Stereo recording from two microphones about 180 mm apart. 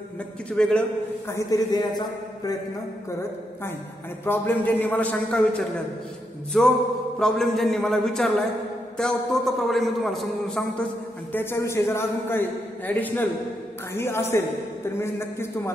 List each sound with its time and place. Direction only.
0.5 s a man's voice: 5° left (ahead or behind)
1.3 s speech: 20° left (ahead or behind)
4.2 s a man's voice: 10° left (ahead or behind)
6.5 s a man's voice: centre (ahead or behind)
11.3 s a man's voice: 15° left (ahead or behind)